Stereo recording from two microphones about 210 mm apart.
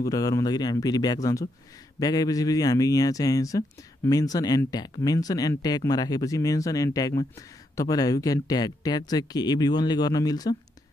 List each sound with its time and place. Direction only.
0.0 s speech: 15° left (ahead or behind)